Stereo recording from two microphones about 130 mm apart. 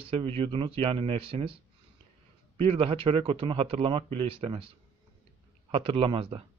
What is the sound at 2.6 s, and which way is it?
Speech, 45° right (ahead or behind).